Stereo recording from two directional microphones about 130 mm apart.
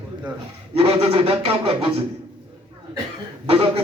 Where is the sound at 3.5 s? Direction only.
45° right (ahead or behind).